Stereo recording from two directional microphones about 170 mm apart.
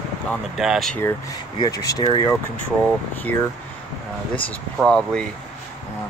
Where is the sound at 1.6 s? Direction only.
20° left (ahead or behind).